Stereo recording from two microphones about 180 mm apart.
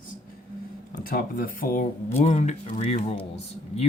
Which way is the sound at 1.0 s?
55° left (ahead or behind).